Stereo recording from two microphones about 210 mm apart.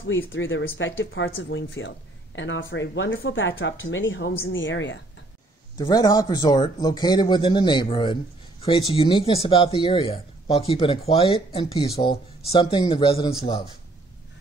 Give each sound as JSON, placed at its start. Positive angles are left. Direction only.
{"t": 0.0, "sound": "speech", "side_deg": 65}
{"t": 5.8, "sound": "a man's voice", "side_deg": 20}